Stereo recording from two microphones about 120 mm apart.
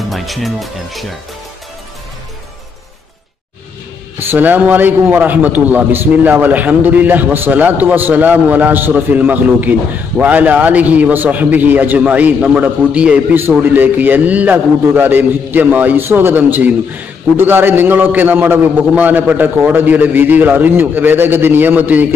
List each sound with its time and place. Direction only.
0.1 s speech: centre (ahead or behind)
4.2 s a man's voice: 15° right (ahead or behind)